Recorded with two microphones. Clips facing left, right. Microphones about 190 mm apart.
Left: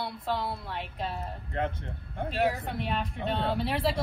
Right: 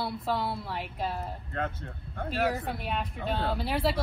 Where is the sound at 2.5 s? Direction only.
Centre (ahead or behind).